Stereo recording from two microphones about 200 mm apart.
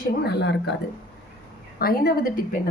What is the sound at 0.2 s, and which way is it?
Speech, 55° left (ahead or behind).